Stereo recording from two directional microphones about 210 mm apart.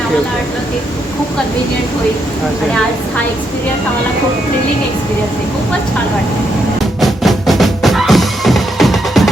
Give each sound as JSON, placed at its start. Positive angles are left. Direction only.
{"t": 7.0, "sound": "music", "side_deg": 0}